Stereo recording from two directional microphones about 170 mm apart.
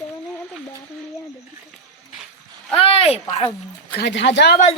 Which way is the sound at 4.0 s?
90° left.